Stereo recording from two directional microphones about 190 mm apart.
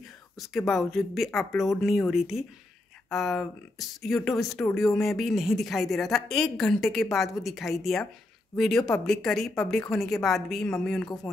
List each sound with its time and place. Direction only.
0.4 s a woman's voice: centre (ahead or behind)